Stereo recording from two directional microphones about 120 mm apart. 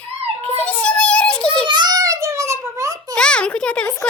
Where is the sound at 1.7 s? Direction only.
35° right (ahead or behind).